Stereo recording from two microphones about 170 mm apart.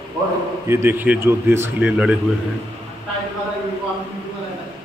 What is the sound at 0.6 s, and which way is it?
A man's voice, 15° right (ahead or behind).